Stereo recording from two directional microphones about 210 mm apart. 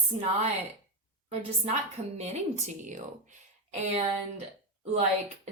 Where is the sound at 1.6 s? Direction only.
30° right (ahead or behind).